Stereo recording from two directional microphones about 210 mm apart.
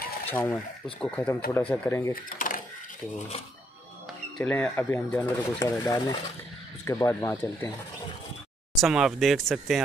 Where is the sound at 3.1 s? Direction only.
30° left (ahead or behind).